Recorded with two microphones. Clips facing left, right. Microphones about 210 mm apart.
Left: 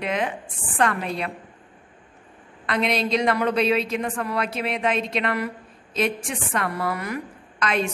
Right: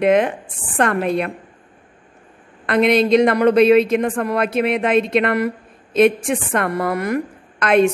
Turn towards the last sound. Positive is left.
turn(degrees=-55)  # may be behind; listen again after turning